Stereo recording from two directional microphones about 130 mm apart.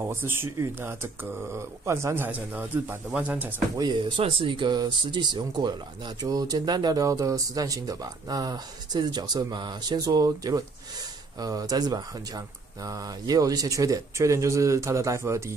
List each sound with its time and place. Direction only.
0.0 s speech: 15° right (ahead or behind)
4.2 s speech: 45° right (ahead or behind); by 15.5 s 20° right (ahead or behind)